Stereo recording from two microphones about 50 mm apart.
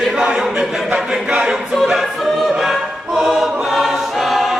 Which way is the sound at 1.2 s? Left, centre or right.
Centre.